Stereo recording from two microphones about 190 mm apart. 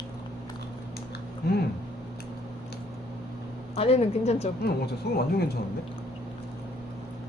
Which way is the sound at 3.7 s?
30° left (ahead or behind).